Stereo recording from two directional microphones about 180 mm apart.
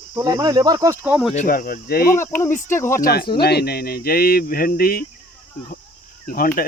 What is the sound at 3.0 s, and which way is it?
Speech, 60° left (ahead or behind).